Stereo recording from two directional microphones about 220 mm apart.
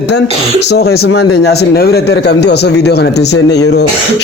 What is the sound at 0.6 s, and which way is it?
Speech, 50° left (ahead or behind).